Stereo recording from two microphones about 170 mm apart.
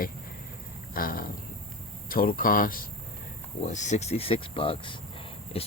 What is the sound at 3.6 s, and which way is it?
Speech, 45° left (ahead or behind).